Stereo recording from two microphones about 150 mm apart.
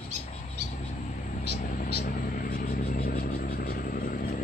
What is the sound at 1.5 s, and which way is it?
Vehicle, 65° left (ahead or behind).